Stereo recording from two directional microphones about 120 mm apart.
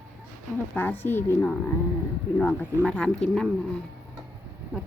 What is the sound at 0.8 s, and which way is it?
Speech, 15° left (ahead or behind).